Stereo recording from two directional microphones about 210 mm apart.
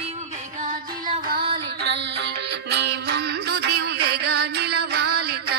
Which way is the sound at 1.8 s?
55° right (ahead or behind).